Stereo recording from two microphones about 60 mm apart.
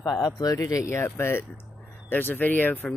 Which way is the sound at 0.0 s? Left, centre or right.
Left.